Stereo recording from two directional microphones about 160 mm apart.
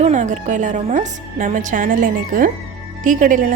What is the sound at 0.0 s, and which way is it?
A woman's voice, 50° right (ahead or behind).